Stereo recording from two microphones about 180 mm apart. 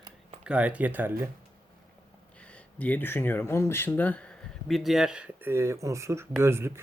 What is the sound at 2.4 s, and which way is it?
Speech, 5° left (ahead or behind).